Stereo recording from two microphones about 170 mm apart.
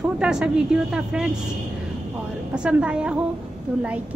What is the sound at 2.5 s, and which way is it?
Speech, 5° right (ahead or behind).